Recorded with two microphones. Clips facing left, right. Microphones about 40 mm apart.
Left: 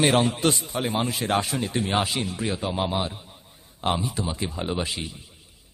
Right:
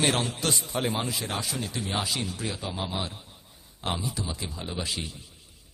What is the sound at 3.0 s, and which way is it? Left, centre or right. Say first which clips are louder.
A man's voice: left 5 dB; centre.